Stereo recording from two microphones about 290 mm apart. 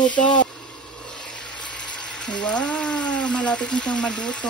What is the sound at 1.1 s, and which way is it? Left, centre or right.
Frying, centre.